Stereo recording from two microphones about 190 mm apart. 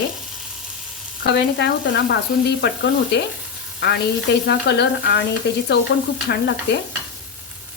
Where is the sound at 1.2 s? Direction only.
65° left (ahead or behind).